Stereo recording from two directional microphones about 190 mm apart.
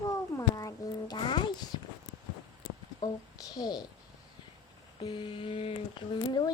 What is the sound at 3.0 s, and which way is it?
Speech, 20° left (ahead or behind).